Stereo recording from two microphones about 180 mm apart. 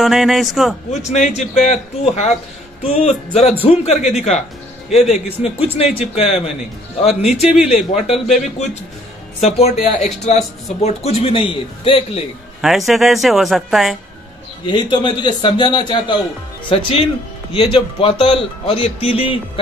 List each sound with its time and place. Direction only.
0.0 s speech: centre (ahead or behind)
1.1 s speech: 40° left (ahead or behind)
12.6 s speech: centre (ahead or behind)
14.7 s a man's voice: 25° left (ahead or behind)